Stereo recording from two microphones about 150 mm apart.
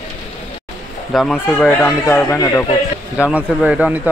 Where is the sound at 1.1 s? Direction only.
Centre (ahead or behind).